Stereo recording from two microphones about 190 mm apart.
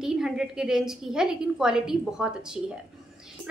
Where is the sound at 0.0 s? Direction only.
5° right (ahead or behind).